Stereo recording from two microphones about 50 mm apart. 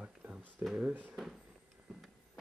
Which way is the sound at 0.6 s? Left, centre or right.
Right.